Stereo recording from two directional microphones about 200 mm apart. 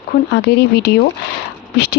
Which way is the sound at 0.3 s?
55° left (ahead or behind).